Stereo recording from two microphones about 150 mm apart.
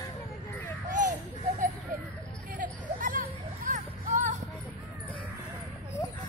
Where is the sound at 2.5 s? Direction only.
65° right (ahead or behind).